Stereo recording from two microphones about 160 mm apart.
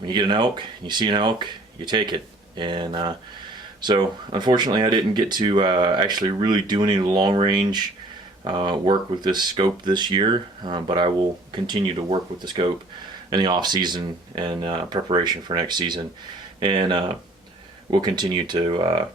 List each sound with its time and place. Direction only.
0.0 s speech: 30° right (ahead or behind)